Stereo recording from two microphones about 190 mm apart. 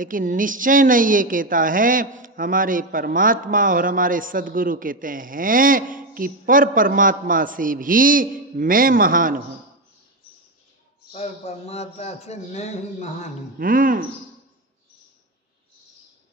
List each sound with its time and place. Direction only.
0.0 s a woman's voice: 45° right (ahead or behind)
11.1 s a man's voice: 35° left (ahead or behind)
13.6 s a woman's voice: 45° right (ahead or behind)